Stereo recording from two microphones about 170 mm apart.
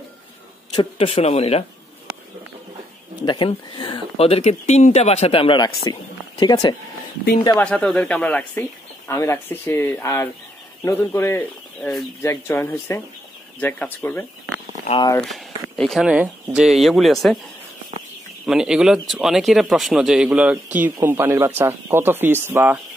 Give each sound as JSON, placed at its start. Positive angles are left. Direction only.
{"t": 0.7, "sound": "speech", "side_deg": 35}
{"t": 3.3, "sound": "speech", "side_deg": 30}
{"t": 7.5, "sound": "speech", "side_deg": 5}
{"t": 15.8, "sound": "speech", "side_deg": 0}
{"t": 18.4, "sound": "speech", "side_deg": -5}